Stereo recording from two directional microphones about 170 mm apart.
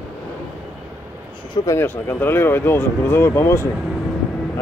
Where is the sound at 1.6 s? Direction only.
15° left (ahead or behind).